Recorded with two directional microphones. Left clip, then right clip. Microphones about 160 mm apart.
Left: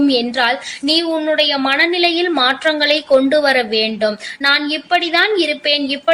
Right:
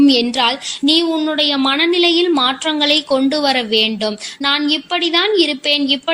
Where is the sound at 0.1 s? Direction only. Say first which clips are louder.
Right 1 dB; 40° right (ahead or behind).